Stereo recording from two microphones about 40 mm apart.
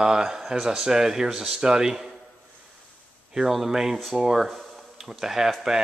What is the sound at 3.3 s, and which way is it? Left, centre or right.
Speech, centre.